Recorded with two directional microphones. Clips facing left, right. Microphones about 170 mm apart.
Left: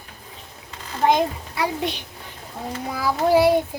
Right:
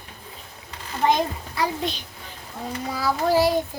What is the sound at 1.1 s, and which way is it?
Speech, 60° left (ahead or behind).